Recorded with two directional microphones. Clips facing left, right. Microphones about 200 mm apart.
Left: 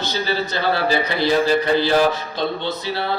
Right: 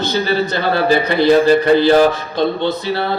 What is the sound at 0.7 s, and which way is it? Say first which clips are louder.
Speech: right 6 dB; 55° right (ahead or behind).